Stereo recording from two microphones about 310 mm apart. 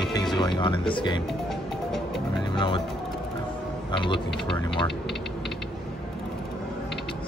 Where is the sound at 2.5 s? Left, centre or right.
Centre.